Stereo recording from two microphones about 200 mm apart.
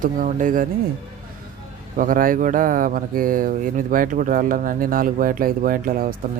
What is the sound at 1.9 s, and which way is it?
Speech, 45° right (ahead or behind).